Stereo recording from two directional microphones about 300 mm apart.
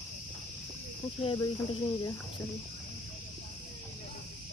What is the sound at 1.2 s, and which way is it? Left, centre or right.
Speech, centre.